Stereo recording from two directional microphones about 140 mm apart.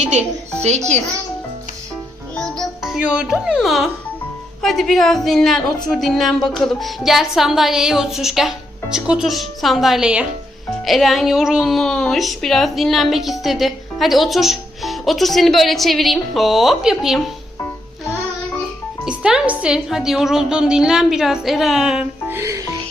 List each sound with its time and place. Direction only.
0.0 s speech: 55° right (ahead or behind)
2.3 s music: 5° left (ahead or behind)
4.6 s a woman's voice: centre (ahead or behind)
19.0 s a woman's voice: 5° right (ahead or behind)
22.3 s speech: 20° right (ahead or behind)